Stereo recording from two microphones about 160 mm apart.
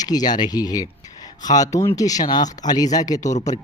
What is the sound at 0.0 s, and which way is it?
Speech, 25° left (ahead or behind).